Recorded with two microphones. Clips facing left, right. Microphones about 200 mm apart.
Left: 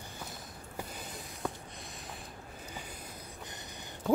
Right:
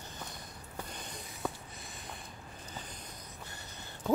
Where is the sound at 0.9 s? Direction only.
5° left (ahead or behind).